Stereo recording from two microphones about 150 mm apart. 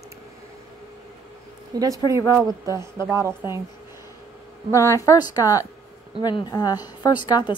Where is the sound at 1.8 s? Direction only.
20° right (ahead or behind).